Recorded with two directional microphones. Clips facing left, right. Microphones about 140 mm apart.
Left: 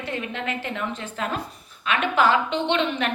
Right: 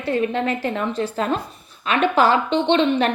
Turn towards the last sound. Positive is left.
turn(degrees=-35)  # may be behind; listen again after turning